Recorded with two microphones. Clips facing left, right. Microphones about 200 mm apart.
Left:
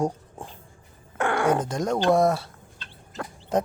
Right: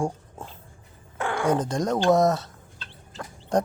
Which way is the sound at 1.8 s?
10° left (ahead or behind).